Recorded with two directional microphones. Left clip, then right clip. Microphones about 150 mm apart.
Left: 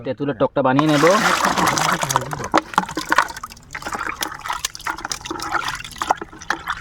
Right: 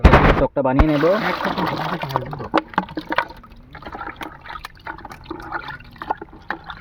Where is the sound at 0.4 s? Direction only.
30° left (ahead or behind).